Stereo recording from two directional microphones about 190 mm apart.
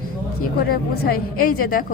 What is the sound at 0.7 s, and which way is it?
A woman's voice, 50° left (ahead or behind).